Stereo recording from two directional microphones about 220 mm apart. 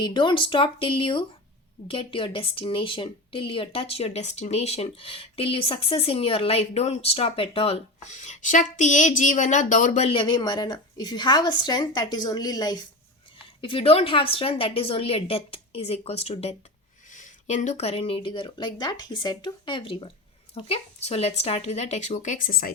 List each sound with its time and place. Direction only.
0.0 s speech: 20° left (ahead or behind); by 22.7 s 40° left (ahead or behind)